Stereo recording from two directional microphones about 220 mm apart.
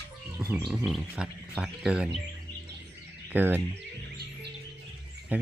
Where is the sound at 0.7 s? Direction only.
Centre (ahead or behind).